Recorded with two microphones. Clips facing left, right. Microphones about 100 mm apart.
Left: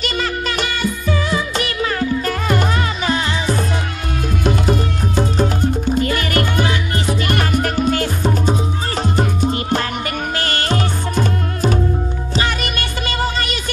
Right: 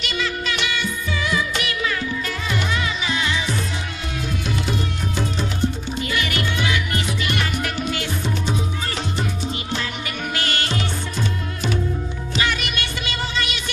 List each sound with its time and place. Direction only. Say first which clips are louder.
0.0 s music of bollywood: left 4 dB; 45° left (ahead or behind)
4.5 s music: left 9 dB; 45° left (ahead or behind)